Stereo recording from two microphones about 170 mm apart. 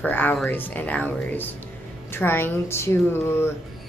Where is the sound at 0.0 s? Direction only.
10° left (ahead or behind).